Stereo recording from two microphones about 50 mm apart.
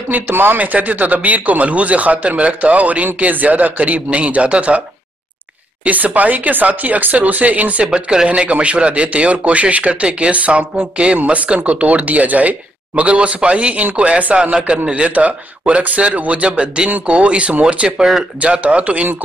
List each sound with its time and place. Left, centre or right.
0.1 s speech: right
0.6 s speech: right
5.9 s speech: right